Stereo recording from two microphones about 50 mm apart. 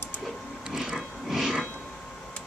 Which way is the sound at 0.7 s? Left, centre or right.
Centre.